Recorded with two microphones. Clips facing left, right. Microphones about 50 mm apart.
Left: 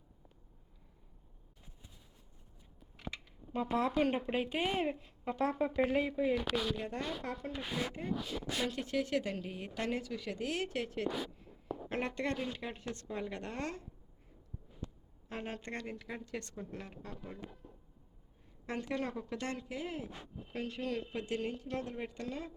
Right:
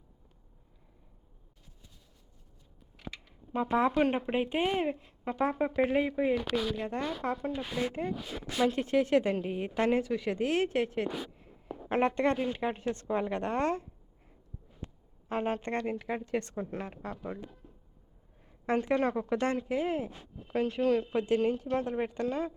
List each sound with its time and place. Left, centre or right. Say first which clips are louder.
3.5 s a woman's voice: right 5 dB; right
6.3 s speech: right 4 dB; centre
8.7 s a woman's voice: right 9 dB; right
14.8 s a sound: right 1 dB; right
15.3 s a woman's voice: right 10 dB; right
18.6 s a woman's voice: right 10 dB; right
20.5 s speech: right 11 dB; right
21.2 s a woman's voice: right 10 dB; right